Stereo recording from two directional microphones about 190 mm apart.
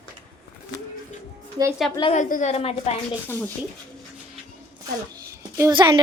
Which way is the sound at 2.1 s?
40° left (ahead or behind).